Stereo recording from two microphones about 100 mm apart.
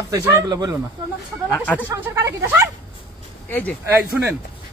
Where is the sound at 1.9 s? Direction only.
25° right (ahead or behind).